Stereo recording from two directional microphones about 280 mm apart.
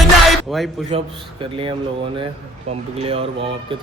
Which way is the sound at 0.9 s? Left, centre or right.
Right.